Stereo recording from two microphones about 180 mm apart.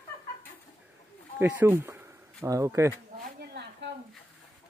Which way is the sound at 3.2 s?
65° right (ahead or behind).